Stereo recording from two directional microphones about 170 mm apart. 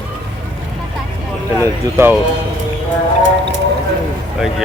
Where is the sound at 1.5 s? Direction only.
15° right (ahead or behind).